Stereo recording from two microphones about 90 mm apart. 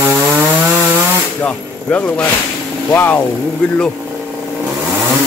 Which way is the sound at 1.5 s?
15° left (ahead or behind).